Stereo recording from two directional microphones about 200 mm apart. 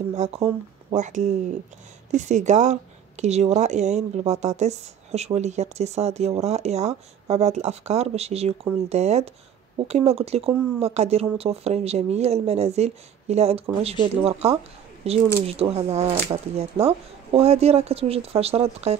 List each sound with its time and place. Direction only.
0.1 s speech: 35° right (ahead or behind)